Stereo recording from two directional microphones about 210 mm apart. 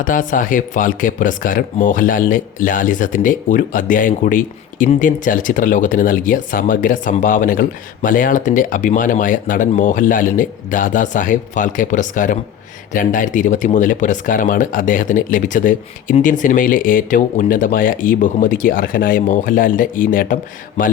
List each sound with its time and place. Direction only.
0.0 s speech: 40° left (ahead or behind)